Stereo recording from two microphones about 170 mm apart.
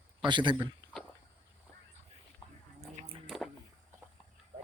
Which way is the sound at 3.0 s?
35° right (ahead or behind).